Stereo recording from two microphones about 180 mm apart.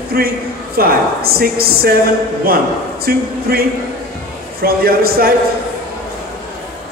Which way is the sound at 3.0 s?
60° right (ahead or behind).